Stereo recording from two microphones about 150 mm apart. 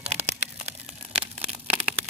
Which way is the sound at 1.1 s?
10° right (ahead or behind).